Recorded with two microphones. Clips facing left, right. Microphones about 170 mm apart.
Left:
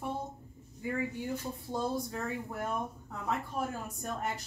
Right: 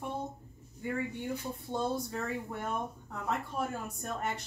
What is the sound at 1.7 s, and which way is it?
Speech, centre (ahead or behind).